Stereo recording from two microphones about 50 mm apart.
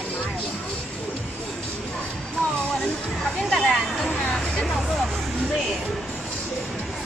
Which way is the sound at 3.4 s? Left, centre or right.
Centre.